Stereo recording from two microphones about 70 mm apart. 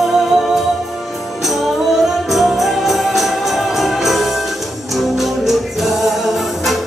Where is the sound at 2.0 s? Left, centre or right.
Centre.